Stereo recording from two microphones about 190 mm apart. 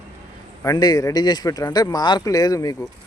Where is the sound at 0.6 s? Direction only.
20° left (ahead or behind).